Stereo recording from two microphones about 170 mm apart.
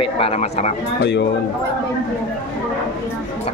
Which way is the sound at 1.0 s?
90° left.